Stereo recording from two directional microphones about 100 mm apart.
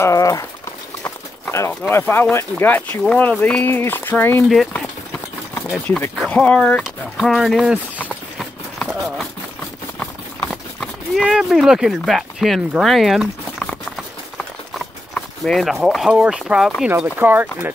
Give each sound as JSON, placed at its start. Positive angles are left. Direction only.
{"t": 0.0, "sound": "speech", "side_deg": 35}
{"t": 1.0, "sound": "clip-clop", "side_deg": 20}
{"t": 1.9, "sound": "speech", "side_deg": 20}
{"t": 5.9, "sound": "speech", "side_deg": 15}
{"t": 6.8, "sound": "speech", "side_deg": 0}
{"t": 10.5, "sound": "clip-clop", "side_deg": 0}
{"t": 11.2, "sound": "speech", "side_deg": -5}
{"t": 15.1, "sound": "speech", "side_deg": 5}
{"t": 17.0, "sound": "speech", "side_deg": -20}